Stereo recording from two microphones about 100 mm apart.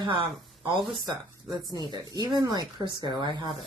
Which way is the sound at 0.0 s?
55° right (ahead or behind).